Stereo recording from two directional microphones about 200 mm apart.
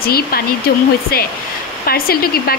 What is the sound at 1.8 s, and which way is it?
Speech, 50° left (ahead or behind).